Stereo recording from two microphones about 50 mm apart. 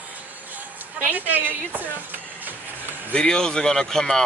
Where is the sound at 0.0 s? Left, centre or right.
Right.